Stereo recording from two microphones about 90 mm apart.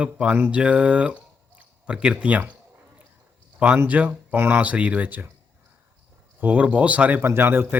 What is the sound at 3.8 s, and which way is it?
Speech, 15° right (ahead or behind).